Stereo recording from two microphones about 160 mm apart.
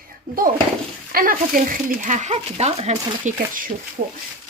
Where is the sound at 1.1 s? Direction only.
65° right (ahead or behind); by 2.9 s 40° right (ahead or behind).